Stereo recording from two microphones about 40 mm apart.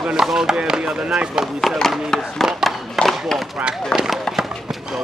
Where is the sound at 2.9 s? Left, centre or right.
Centre.